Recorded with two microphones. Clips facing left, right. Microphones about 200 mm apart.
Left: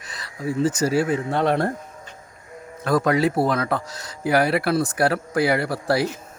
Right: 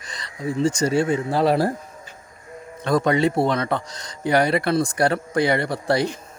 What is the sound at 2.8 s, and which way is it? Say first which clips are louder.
Speech: even; 5° left (ahead or behind).